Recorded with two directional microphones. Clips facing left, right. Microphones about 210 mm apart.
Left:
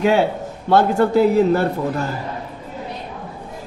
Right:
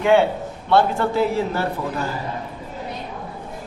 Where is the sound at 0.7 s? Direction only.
40° left (ahead or behind).